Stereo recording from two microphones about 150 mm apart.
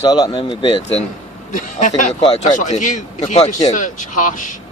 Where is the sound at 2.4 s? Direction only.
55° left (ahead or behind).